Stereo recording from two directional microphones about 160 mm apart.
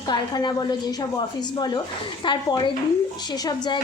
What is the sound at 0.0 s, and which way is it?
A woman's voice, 25° left (ahead or behind).